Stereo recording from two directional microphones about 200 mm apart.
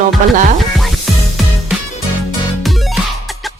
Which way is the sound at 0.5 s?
Centre (ahead or behind).